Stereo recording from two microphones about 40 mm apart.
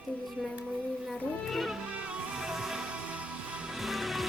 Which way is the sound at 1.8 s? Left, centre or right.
Right.